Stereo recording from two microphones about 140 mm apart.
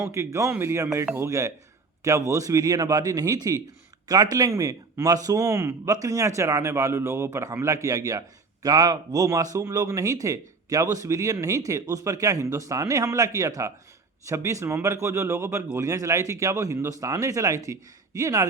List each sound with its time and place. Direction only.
0.1 s speech: 20° right (ahead or behind)